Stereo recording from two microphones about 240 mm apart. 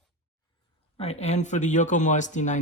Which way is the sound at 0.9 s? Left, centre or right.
Left.